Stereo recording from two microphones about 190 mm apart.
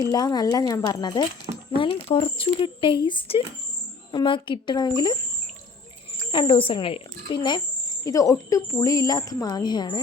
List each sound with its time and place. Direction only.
0.1 s a woman's voice: 20° left (ahead or behind)
6.3 s a woman's voice: 25° left (ahead or behind)